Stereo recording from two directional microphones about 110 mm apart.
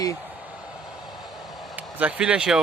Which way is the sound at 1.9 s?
10° right (ahead or behind).